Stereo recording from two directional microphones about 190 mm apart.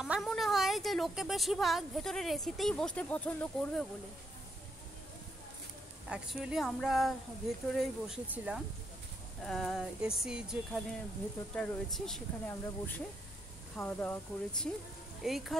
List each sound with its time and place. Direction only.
0.0 s a woman's voice: centre (ahead or behind)
6.0 s speech: 5° right (ahead or behind); by 14.7 s 10° left (ahead or behind)
15.2 s speech: centre (ahead or behind)